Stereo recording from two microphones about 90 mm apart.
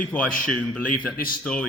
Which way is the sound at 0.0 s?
15° left (ahead or behind).